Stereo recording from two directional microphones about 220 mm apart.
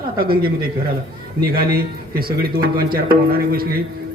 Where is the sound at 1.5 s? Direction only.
45° right (ahead or behind).